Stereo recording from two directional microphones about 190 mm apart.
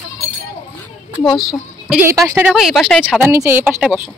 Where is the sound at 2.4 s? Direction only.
Centre (ahead or behind).